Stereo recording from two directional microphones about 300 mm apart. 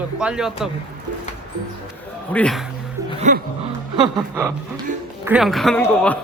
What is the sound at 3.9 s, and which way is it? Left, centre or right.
Speech, centre.